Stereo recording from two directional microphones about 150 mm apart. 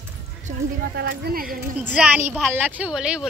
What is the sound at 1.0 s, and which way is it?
Speech, 90° right.